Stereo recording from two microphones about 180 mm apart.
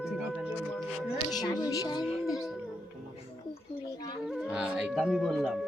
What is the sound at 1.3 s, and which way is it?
Music, 20° left (ahead or behind).